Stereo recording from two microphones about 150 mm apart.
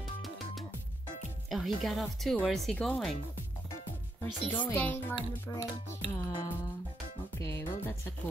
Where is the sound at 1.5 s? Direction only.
Centre (ahead or behind).